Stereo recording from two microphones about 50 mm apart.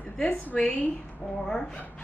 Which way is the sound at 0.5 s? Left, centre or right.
Centre.